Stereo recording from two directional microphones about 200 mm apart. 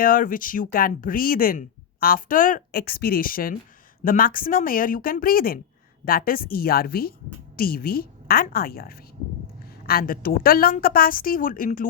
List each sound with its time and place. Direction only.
0.0 s speech: 45° left (ahead or behind)